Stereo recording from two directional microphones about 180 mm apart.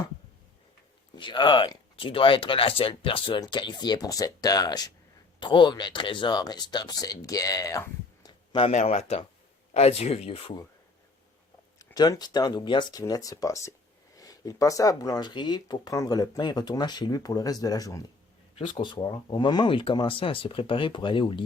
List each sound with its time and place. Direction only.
1.1 s speech: 25° left (ahead or behind)
11.8 s speech: 20° left (ahead or behind)